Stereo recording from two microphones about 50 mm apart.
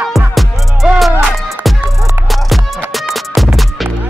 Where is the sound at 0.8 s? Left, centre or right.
Centre.